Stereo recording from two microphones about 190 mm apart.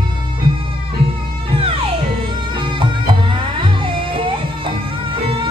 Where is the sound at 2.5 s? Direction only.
25° right (ahead or behind).